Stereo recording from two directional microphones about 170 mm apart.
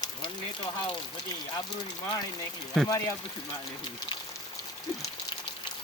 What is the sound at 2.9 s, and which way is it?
Speech, 20° left (ahead or behind).